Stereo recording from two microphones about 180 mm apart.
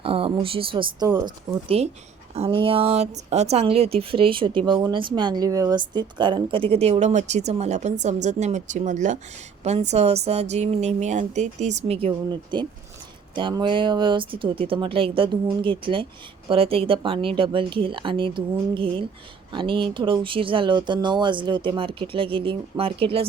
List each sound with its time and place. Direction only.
0.0 s speech: 30° right (ahead or behind)